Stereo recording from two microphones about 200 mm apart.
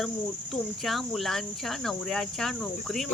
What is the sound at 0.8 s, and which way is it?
Speech, centre (ahead or behind).